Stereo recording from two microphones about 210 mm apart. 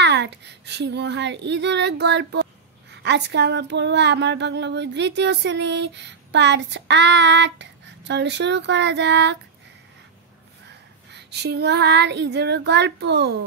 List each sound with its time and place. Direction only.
0.0 s speech: 55° right (ahead or behind)
10.7 s female singing: 55° right (ahead or behind)